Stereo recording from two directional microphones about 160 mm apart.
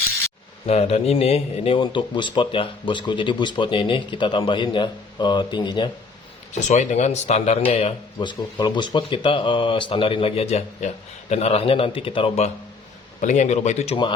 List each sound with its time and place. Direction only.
0.7 s speech: 40° left (ahead or behind)
6.5 s speech: 45° left (ahead or behind)
13.2 s speech: 50° left (ahead or behind)